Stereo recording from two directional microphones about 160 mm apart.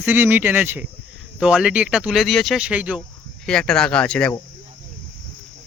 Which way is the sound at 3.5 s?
5° left (ahead or behind).